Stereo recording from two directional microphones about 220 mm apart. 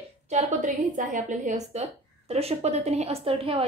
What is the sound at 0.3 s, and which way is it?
A woman's voice, 35° right (ahead or behind).